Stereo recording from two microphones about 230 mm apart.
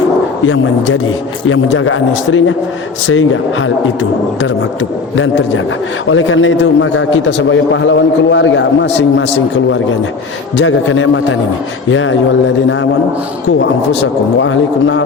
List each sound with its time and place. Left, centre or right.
0.4 s a man's voice: left
13.6 s a man's voice: left